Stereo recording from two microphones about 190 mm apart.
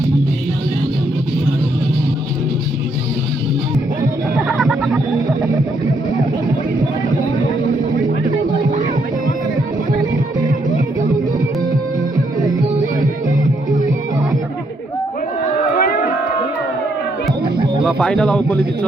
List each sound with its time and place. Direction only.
4.4 s music: 5° right (ahead or behind)
15.7 s crowd: 50° left (ahead or behind)
17.8 s a sound: 5° left (ahead or behind)